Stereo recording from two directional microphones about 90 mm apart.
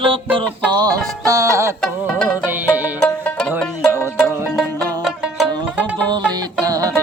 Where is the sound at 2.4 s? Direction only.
20° right (ahead or behind).